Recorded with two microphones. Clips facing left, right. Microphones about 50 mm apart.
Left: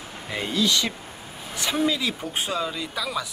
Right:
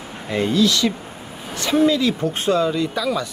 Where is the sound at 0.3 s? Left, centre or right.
Centre.